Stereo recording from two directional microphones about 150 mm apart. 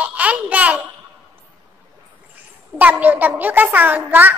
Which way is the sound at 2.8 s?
10° right (ahead or behind).